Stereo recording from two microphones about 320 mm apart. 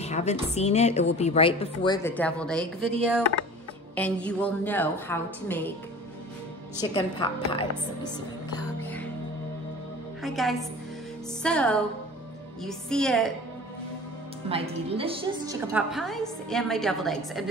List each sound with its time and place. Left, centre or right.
0.0 s a woman's voice: left; by 2.9 s centre
3.9 s a woman's voice: centre
6.8 s a woman's voice: centre
10.2 s a woman's voice: centre
14.5 s a woman's voice: centre